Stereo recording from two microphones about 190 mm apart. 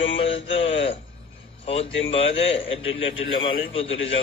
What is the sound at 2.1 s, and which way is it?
Speech, 30° left (ahead or behind).